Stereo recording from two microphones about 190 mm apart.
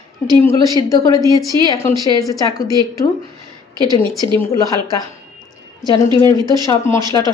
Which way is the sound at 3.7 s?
20° right (ahead or behind).